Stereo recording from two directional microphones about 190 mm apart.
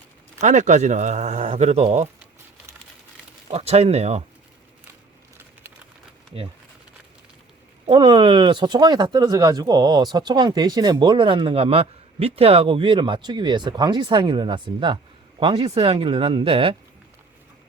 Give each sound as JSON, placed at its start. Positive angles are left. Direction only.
{"t": 0.3, "sound": "speech", "side_deg": -40}
{"t": 3.5, "sound": "speech", "side_deg": -35}
{"t": 7.9, "sound": "speech", "side_deg": -25}